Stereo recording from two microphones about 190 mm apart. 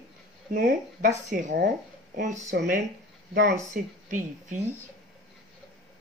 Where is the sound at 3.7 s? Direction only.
40° right (ahead or behind).